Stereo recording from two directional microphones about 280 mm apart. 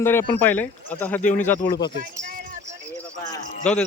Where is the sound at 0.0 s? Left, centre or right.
Centre.